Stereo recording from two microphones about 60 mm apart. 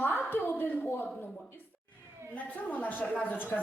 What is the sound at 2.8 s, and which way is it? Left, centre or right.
Speech, left.